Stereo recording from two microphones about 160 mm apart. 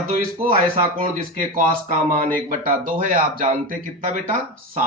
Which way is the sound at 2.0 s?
60° right (ahead or behind).